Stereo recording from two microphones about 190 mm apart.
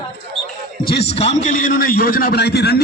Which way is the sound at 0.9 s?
35° left (ahead or behind).